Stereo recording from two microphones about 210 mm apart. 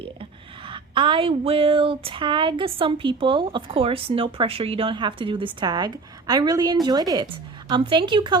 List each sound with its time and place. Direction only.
0.0 s speech: 25° right (ahead or behind)